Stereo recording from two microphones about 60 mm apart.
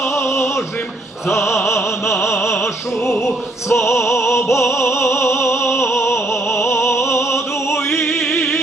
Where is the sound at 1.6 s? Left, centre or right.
Left.